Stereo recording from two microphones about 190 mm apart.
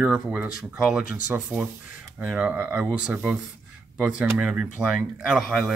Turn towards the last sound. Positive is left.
turn(degrees=-5)  # may be behind; listen again after turning